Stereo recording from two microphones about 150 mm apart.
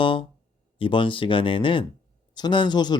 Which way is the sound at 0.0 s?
35° left (ahead or behind).